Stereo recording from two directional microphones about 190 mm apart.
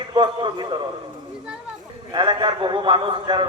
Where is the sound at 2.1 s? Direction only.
25° right (ahead or behind).